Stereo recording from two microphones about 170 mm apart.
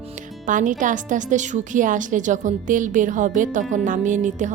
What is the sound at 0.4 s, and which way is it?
A woman's voice, 50° right (ahead or behind).